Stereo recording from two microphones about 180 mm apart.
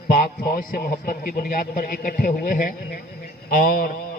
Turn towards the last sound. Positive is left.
turn(degrees=50)  # may be behind; listen again after turning